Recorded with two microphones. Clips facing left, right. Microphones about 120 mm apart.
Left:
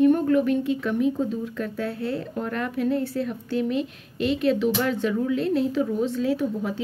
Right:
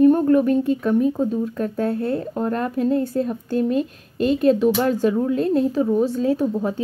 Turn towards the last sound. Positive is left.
turn(degrees=-40)  # may be behind; listen again after turning